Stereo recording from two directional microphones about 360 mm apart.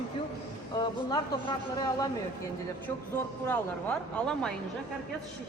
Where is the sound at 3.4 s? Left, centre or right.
Centre.